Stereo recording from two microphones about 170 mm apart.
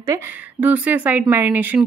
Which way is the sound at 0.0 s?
15° right (ahead or behind).